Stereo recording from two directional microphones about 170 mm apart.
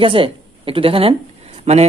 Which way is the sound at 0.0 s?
30° right (ahead or behind).